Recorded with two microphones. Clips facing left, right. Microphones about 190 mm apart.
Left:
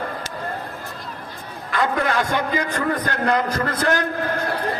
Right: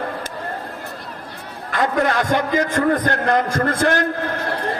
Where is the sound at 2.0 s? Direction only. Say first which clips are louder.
Right 3 dB; 45° right (ahead or behind).